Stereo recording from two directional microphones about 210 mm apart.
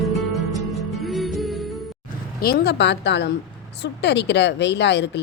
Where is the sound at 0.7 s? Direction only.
Centre (ahead or behind).